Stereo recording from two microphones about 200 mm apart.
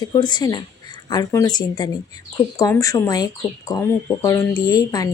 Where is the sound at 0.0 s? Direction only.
20° left (ahead or behind).